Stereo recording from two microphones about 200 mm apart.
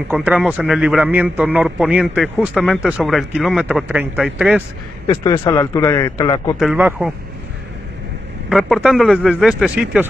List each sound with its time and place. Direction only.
0.1 s a man's voice: 5° right (ahead or behind)
5.1 s a man's voice: 20° left (ahead or behind)
6.6 s a man's voice: 5° right (ahead or behind)
8.5 s a man's voice: centre (ahead or behind)